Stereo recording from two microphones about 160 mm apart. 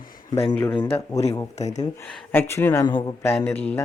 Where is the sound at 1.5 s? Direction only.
45° left (ahead or behind).